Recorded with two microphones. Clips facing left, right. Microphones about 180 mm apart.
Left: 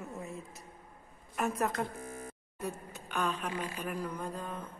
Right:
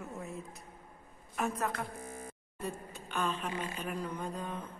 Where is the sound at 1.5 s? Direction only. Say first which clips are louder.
Left 3 dB; 15° left (ahead or behind).